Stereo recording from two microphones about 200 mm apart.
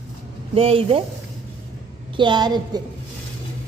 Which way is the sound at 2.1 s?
20° right (ahead or behind).